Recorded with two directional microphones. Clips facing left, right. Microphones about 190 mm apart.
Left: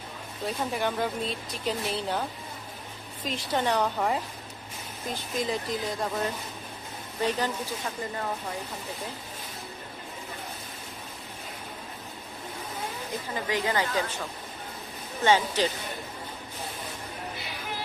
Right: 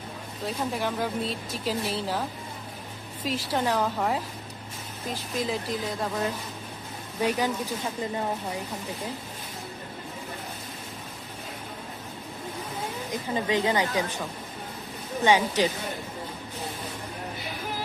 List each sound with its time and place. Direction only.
0.4 s speech: centre (ahead or behind)
3.2 s speech: 5° right (ahead or behind)
7.2 s speech: 10° right (ahead or behind)
13.1 s a woman's voice: 20° right (ahead or behind)
15.2 s speech: 15° right (ahead or behind)